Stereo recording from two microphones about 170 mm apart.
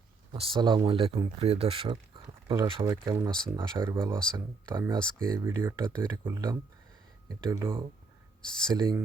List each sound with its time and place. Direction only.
0.3 s speech: 30° right (ahead or behind)
2.8 s speech: 20° right (ahead or behind)
8.7 s speech: 25° right (ahead or behind)